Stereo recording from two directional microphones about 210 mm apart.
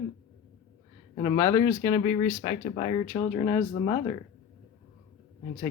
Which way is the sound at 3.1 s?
15° left (ahead or behind).